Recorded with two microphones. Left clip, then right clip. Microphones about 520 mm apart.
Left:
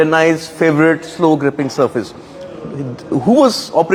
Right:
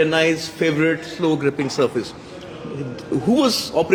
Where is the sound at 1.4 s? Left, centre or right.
Centre.